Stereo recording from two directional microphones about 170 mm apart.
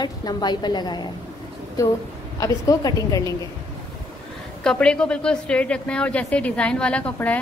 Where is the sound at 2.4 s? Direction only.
20° left (ahead or behind).